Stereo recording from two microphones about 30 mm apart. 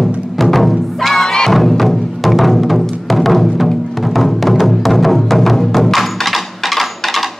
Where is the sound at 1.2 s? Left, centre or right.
Centre.